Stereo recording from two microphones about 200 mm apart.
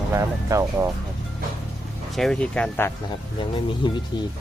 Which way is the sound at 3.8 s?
25° left (ahead or behind).